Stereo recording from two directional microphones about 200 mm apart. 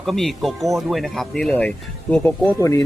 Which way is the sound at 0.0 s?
Centre (ahead or behind).